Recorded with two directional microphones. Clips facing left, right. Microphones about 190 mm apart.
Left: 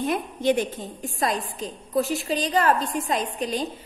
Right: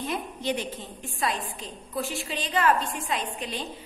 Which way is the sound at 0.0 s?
50° left (ahead or behind).